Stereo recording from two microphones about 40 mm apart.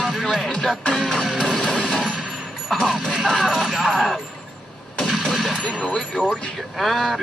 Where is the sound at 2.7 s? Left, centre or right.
Centre.